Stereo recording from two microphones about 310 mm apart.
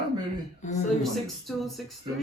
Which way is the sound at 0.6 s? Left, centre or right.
Left.